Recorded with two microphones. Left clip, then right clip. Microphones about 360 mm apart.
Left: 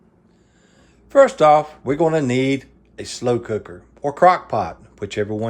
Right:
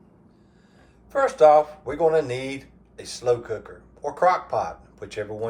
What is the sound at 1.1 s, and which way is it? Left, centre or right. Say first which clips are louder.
Speech: left 4 dB; left.